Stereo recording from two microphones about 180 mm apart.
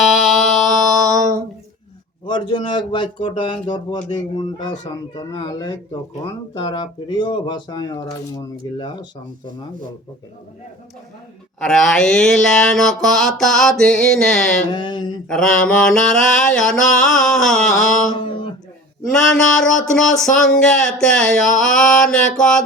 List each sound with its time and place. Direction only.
0.0 s music: centre (ahead or behind)
2.2 s speech: 25° left (ahead or behind)
11.6 s speech: centre (ahead or behind)
14.7 s speech: 25° left (ahead or behind)
15.3 s speech: 5° left (ahead or behind)